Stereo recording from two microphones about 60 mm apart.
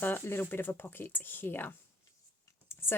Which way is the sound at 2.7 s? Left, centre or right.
Left.